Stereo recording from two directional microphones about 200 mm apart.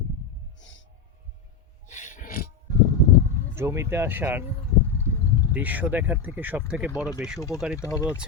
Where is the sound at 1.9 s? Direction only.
40° left (ahead or behind).